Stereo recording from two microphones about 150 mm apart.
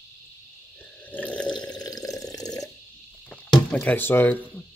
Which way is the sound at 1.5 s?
25° left (ahead or behind).